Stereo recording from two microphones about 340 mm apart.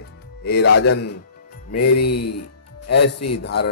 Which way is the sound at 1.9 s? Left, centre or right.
Left.